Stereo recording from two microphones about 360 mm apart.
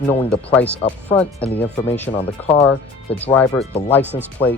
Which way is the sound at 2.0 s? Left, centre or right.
Centre.